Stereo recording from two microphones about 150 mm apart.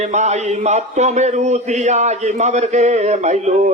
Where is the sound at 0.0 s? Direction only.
50° right (ahead or behind).